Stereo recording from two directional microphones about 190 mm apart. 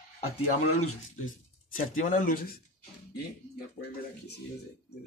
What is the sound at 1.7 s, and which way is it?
Speech, 45° left (ahead or behind).